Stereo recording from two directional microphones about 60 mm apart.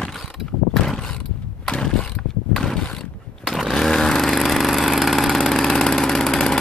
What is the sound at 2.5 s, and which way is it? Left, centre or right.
Mechanisms, centre.